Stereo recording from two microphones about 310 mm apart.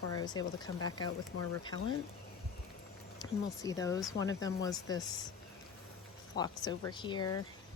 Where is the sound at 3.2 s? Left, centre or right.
Centre.